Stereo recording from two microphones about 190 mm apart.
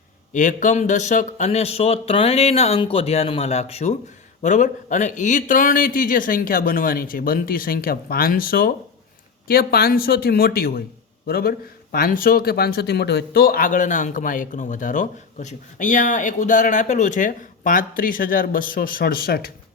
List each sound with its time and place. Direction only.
0.3 s speech: 40° left (ahead or behind)